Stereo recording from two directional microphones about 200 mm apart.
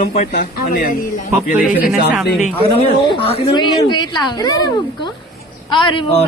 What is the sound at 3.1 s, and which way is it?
Speech, 25° left (ahead or behind).